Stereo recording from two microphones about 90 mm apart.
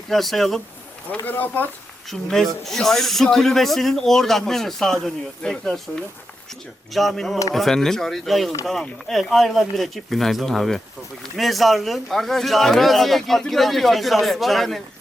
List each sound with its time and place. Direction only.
0.1 s speech: centre (ahead or behind)
1.2 s speech: 20° left (ahead or behind)
2.0 s speech: 5° left (ahead or behind)
6.9 s speech: centre (ahead or behind)